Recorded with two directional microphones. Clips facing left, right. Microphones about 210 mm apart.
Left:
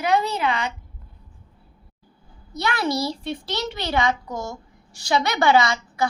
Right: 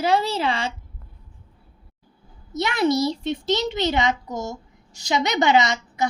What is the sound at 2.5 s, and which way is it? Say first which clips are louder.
A child's voice: right 4 dB; 20° right (ahead or behind).